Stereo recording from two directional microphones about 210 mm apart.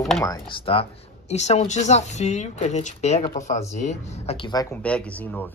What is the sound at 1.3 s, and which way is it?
Speech, 30° left (ahead or behind).